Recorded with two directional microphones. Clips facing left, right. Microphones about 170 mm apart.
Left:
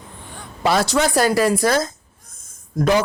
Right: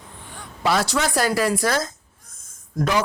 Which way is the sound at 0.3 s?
25° left (ahead or behind).